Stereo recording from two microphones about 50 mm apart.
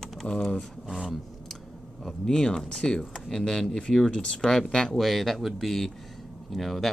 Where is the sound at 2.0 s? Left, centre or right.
Centre.